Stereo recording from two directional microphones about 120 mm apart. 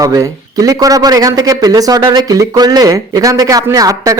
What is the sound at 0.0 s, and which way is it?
A man's voice, 30° right (ahead or behind).